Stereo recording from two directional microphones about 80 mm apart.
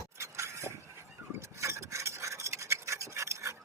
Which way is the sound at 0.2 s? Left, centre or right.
Right.